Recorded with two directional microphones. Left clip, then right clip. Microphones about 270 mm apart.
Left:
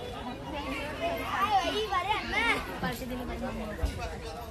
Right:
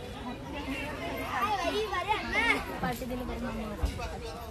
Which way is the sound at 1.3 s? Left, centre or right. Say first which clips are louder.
Left 2 dB; centre.